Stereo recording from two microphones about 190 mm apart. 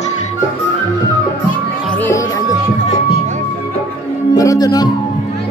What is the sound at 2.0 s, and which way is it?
Music, 15° left (ahead or behind).